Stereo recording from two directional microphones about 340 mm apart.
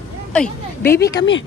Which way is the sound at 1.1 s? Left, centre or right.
Left.